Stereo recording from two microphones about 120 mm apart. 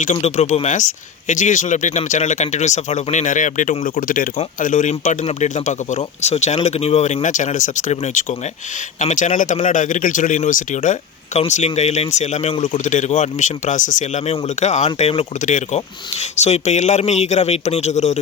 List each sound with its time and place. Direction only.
0.0 s speech: 75° left (ahead or behind)
9.0 s speech: 90° left
11.3 s speech: 70° left (ahead or behind)
15.4 s speech: 90° left
16.4 s speech: 70° left (ahead or behind)